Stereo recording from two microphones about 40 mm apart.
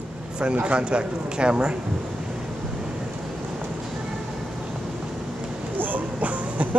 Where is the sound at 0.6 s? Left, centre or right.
Right.